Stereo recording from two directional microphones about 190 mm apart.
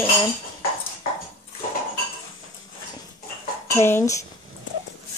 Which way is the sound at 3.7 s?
15° left (ahead or behind).